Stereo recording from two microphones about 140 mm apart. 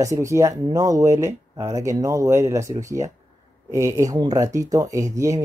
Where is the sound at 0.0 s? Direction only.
20° right (ahead or behind).